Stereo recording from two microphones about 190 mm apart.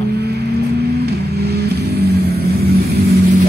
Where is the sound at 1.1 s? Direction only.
55° right (ahead or behind).